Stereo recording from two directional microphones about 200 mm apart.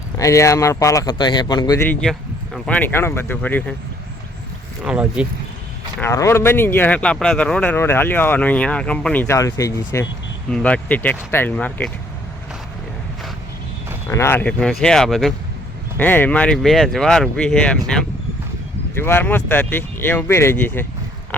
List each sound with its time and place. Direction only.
0.2 s speech: 15° left (ahead or behind)
4.8 s speech: 5° right (ahead or behind)
6.0 s speech: 15° left (ahead or behind)
14.1 s speech: 15° left (ahead or behind)